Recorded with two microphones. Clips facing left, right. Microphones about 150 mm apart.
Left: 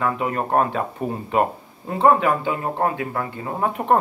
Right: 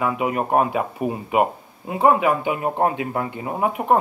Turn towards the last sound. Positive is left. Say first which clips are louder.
# right 1 dB
turn(degrees=-10)  # may be behind; listen again after turning